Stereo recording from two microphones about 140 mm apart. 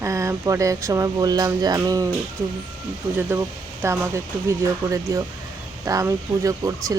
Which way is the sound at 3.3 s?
15° right (ahead or behind).